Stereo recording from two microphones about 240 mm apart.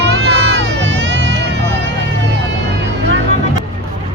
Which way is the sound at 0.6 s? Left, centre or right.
Right.